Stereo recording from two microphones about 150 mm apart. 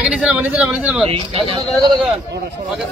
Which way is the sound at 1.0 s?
40° right (ahead or behind).